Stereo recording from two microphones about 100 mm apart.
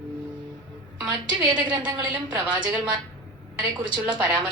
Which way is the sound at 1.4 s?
45° right (ahead or behind).